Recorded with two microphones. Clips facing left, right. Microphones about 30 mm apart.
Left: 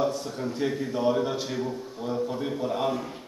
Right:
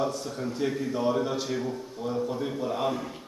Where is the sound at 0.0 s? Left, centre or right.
Centre.